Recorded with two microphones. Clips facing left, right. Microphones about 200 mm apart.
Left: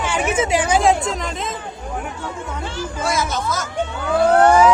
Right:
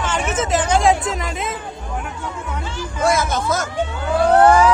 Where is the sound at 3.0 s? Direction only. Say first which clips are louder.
Right 4 dB; 55° right (ahead or behind).